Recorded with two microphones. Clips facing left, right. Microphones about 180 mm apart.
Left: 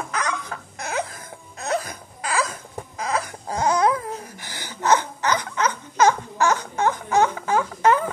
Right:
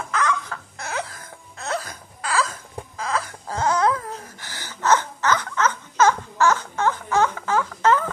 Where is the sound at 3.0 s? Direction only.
15° left (ahead or behind).